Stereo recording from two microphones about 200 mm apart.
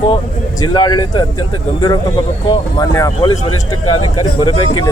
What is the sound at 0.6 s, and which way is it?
Speech, 20° left (ahead or behind).